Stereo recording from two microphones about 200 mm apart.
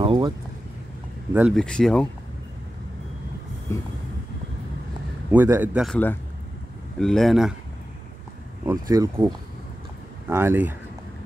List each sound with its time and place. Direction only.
0.0 s a sound: 25° right (ahead or behind)
1.3 s speech: 5° right (ahead or behind)
3.7 s music: 15° left (ahead or behind)
5.3 s speech: 10° right (ahead or behind)
7.0 s speech: centre (ahead or behind)
8.6 s speech: 15° right (ahead or behind)